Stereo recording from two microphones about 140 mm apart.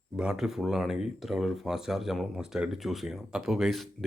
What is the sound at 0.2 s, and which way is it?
Speech, 5° right (ahead or behind).